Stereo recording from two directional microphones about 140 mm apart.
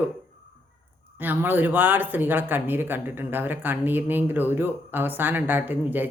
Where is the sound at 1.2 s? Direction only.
15° right (ahead or behind).